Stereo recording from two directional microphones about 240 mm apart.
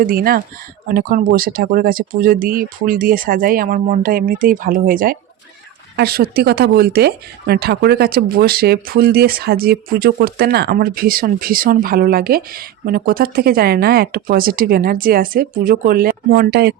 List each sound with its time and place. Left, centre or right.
0.0 s speech: right